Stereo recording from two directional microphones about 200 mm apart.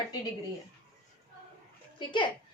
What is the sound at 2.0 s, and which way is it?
Speech, 25° left (ahead or behind).